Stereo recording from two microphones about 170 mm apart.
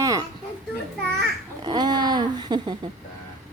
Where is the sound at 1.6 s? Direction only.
25° right (ahead or behind).